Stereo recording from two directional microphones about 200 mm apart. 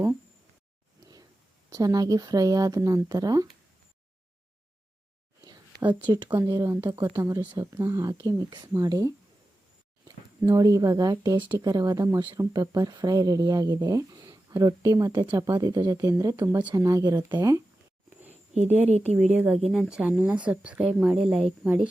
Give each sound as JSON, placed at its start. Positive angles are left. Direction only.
{"t": 1.7, "sound": "speech", "side_deg": -20}
{"t": 5.8, "sound": "speech", "side_deg": -10}
{"t": 6.1, "sound": "speech", "side_deg": -20}
{"t": 10.4, "sound": "speech", "side_deg": -15}
{"t": 18.9, "sound": "a woman's voice", "side_deg": -35}
{"t": 19.3, "sound": "speech", "side_deg": -5}